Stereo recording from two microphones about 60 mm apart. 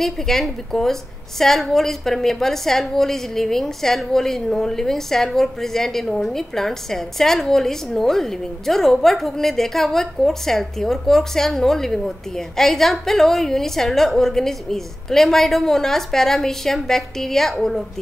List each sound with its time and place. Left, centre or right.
0.0 s a woman's voice: centre